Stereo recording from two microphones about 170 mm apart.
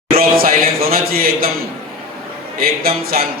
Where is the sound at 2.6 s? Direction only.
60° right (ahead or behind).